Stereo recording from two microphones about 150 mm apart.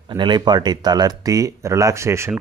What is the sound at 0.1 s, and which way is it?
Speech, 30° right (ahead or behind).